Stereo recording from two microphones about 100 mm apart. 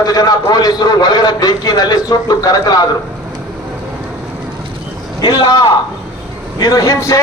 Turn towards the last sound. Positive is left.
turn(degrees=35)  # may be behind; listen again after turning